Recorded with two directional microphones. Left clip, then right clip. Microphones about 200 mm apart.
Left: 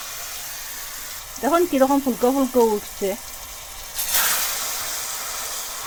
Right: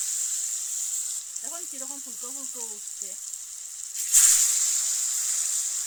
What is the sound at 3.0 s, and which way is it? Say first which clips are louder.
Speech: left 16 dB; 10° right (ahead or behind).